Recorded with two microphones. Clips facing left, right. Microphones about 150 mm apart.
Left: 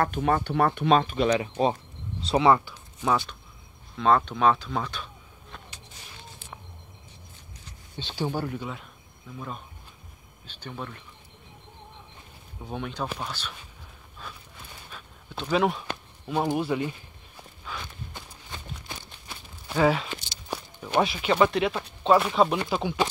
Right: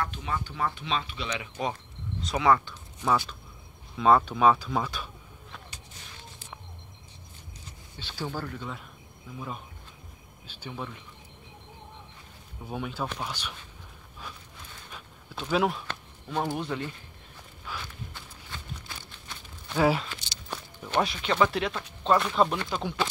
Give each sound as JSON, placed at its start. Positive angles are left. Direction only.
{"t": 0.0, "sound": "speech", "side_deg": 55}
{"t": 2.6, "sound": "speech", "side_deg": 5}
{"t": 8.0, "sound": "speech", "side_deg": 20}
{"t": 9.3, "sound": "speech", "side_deg": -5}
{"t": 12.6, "sound": "speech", "side_deg": -5}
{"t": 14.9, "sound": "a sound", "side_deg": -5}
{"t": 15.4, "sound": "speech", "side_deg": 0}
{"t": 15.9, "sound": "speech", "side_deg": 10}
{"t": 17.8, "sound": "walk", "side_deg": 20}
{"t": 19.7, "sound": "speech", "side_deg": 10}
{"t": 20.1, "sound": "a sound", "side_deg": 10}
{"t": 21.5, "sound": "speech", "side_deg": 5}